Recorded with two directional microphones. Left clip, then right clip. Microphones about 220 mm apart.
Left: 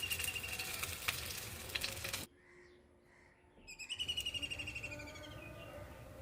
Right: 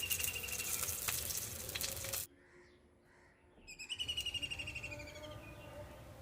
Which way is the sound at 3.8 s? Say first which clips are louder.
Even; centre (ahead or behind).